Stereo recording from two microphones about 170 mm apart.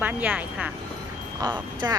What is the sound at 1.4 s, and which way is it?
Speech, 20° right (ahead or behind).